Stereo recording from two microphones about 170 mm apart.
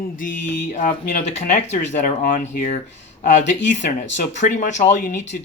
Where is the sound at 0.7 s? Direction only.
50° left (ahead or behind).